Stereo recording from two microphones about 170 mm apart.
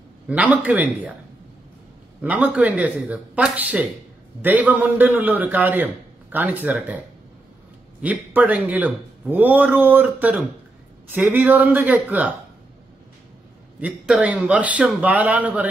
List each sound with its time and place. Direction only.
0.3 s a man's voice: 10° right (ahead or behind)
2.2 s a man's voice: 10° right (ahead or behind)
8.0 s a man's voice: 10° right (ahead or behind)
13.7 s a man's voice: 5° right (ahead or behind)